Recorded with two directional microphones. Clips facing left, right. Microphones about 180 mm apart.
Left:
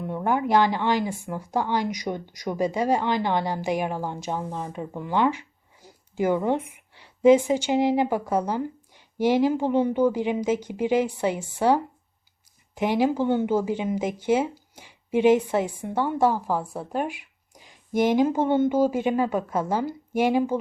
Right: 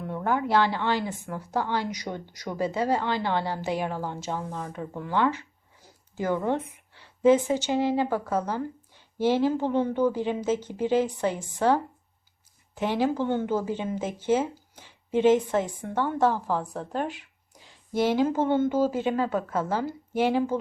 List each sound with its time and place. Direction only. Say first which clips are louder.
0.1 s speech: left 2 dB; 15° left (ahead or behind)